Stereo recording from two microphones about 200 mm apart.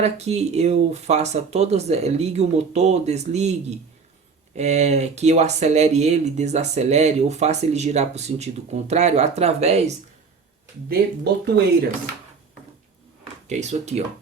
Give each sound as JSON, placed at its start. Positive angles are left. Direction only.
{"t": 0.0, "sound": "speech", "side_deg": -35}
{"t": 10.8, "sound": "speech", "side_deg": -55}
{"t": 13.5, "sound": "speech", "side_deg": -35}